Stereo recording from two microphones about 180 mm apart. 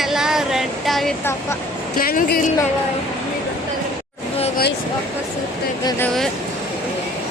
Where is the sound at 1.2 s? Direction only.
15° left (ahead or behind).